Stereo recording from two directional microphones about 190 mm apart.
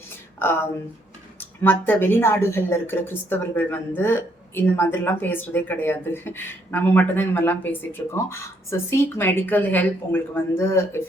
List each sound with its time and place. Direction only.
0.3 s a woman's voice: 10° left (ahead or behind)